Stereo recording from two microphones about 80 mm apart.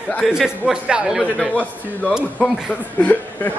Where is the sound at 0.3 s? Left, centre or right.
Centre.